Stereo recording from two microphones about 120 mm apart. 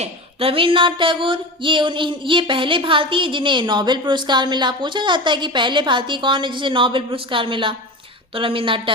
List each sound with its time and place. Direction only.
0.0 s speech: 50° right (ahead or behind)